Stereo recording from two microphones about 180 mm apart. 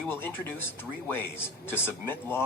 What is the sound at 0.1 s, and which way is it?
Speech, 10° left (ahead or behind).